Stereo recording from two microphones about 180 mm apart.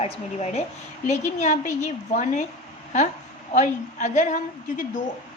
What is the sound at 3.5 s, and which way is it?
A woman's voice, 45° left (ahead or behind).